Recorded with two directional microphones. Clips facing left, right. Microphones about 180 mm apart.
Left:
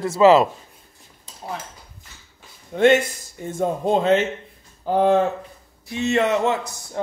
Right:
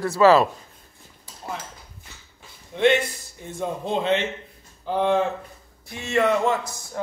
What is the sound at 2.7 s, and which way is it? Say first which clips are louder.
Speech: left 4 dB; 45° left (ahead or behind).